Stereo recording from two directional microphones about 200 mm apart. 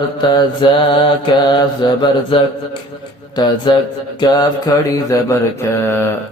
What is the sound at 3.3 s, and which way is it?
Mantra, 20° left (ahead or behind).